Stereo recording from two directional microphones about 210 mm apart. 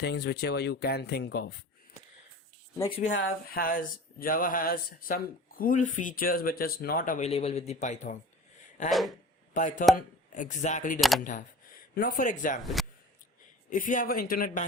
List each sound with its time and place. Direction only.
0.0 s speech: 50° left (ahead or behind)
3.1 s speech: 60° left (ahead or behind)
3.5 s speech: 45° left (ahead or behind)
8.9 s speech: centre (ahead or behind)
9.6 s speech: 35° left (ahead or behind)
12.6 s speech: centre (ahead or behind)
13.7 s speech: 40° left (ahead or behind)